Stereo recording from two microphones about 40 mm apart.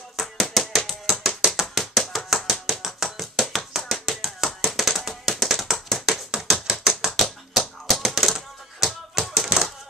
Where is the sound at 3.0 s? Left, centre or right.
Centre.